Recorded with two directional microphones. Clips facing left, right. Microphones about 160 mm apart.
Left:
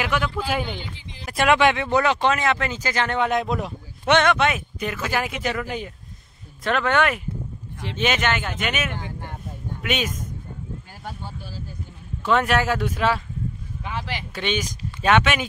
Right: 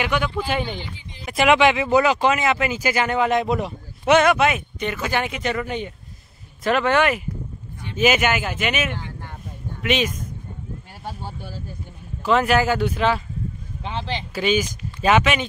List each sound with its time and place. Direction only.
0.0 s speech: centre (ahead or behind)
12.3 s speech: centre (ahead or behind)
13.8 s speech: 25° right (ahead or behind)
14.3 s speech: 5° right (ahead or behind)